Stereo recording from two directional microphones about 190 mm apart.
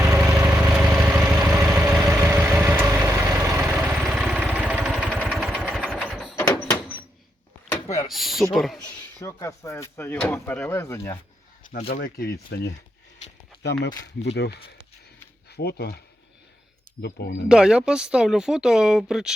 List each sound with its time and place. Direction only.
0.2 s vehicle: 15° right (ahead or behind)
0.5 s vehicle: 5° right (ahead or behind)
4.9 s a sound: 5° left (ahead or behind)
6.3 s door: 10° left (ahead or behind)
8.0 s a sound: centre (ahead or behind)
8.5 s speech: centre (ahead or behind)
9.2 s speech: 15° left (ahead or behind)
11.6 s speech: 45° left (ahead or behind); by 13.9 s 65° left (ahead or behind)
14.1 s speech: 35° left (ahead or behind)
15.4 s speech: 60° left (ahead or behind)
17.0 s speech: 60° left (ahead or behind)
17.5 s speech: 5° right (ahead or behind)